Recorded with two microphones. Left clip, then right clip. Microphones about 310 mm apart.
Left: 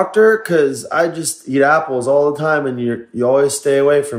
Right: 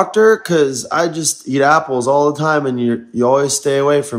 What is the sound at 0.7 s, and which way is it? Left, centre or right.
Speech, right.